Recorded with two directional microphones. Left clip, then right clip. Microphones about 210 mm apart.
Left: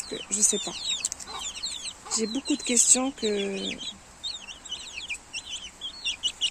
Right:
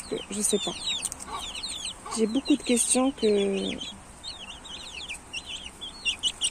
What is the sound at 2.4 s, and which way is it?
Speech, 10° left (ahead or behind).